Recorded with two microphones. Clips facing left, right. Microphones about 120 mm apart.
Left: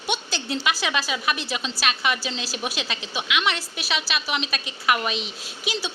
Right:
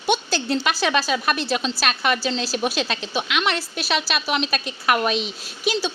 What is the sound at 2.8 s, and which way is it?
Speech, 50° right (ahead or behind).